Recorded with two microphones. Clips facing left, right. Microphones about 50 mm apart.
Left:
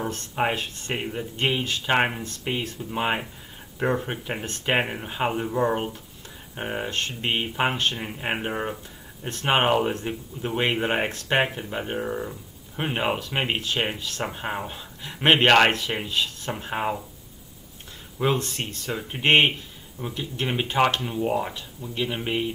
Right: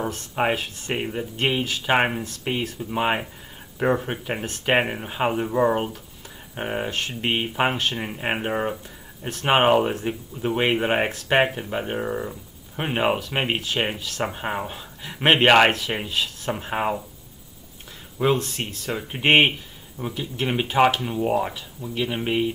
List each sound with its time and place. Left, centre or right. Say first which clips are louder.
0.0 s speech: right 2 dB; centre
18.2 s speech: right 3 dB; centre